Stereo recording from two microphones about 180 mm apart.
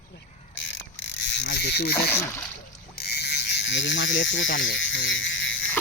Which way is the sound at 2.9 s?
65° left (ahead or behind).